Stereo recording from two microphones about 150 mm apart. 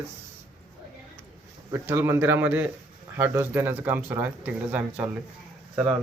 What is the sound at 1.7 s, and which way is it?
Speech, 15° right (ahead or behind).